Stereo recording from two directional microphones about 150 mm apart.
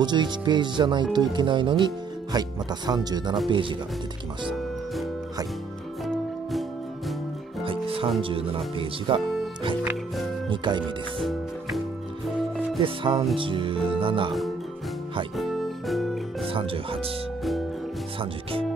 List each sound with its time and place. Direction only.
0.0 s speech: 30° right (ahead or behind)
7.6 s music: 35° right (ahead or behind)
8.2 s speech: 35° right (ahead or behind)
10.5 s speech: 30° right (ahead or behind)
11.1 s music: centre (ahead or behind)
12.8 s speech: 35° right (ahead or behind)
15.3 s music: centre (ahead or behind)
16.4 s speech: 35° right (ahead or behind)
18.2 s music: 40° right (ahead or behind)